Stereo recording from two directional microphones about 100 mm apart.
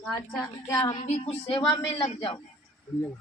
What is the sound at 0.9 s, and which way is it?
Speech, 90° left.